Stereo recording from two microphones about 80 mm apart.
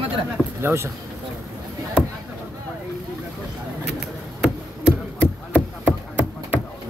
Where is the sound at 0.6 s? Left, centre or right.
Right.